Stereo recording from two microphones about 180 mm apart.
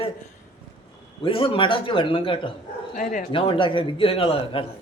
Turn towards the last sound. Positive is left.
turn(degrees=30)  # may be behind; listen again after turning